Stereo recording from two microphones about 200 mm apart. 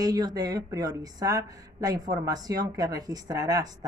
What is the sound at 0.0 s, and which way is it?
A woman's voice, 20° right (ahead or behind).